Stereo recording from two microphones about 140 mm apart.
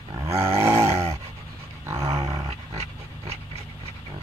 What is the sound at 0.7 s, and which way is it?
Dog, 45° right (ahead or behind).